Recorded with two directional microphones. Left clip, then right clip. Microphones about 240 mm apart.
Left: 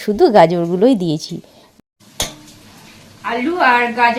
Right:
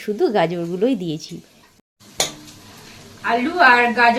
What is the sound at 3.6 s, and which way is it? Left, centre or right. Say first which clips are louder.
Speech: left 1 dB; centre.